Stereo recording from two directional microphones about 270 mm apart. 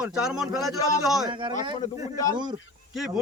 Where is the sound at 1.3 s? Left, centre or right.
Centre.